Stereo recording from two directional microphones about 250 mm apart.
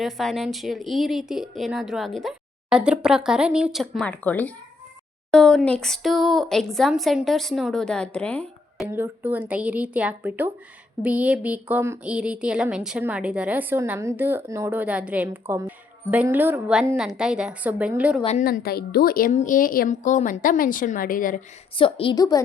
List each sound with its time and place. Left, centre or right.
0.0 s speech: centre
8.9 s a woman's voice: centre
18.2 s a woman's voice: left
18.4 s a woman's voice: left
21.8 s a woman's voice: left